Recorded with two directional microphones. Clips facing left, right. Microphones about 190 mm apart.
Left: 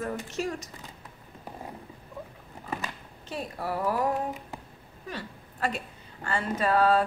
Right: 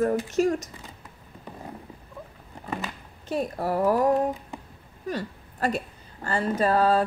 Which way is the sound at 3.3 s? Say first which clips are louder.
Right 6 dB; 45° right (ahead or behind).